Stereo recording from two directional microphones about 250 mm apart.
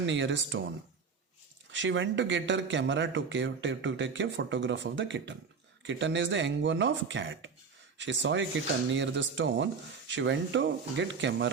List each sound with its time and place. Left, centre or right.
0.0 s speech: right
1.7 s speech: right